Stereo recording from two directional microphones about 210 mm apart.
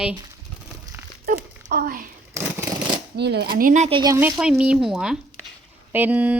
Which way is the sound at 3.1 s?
50° right (ahead or behind).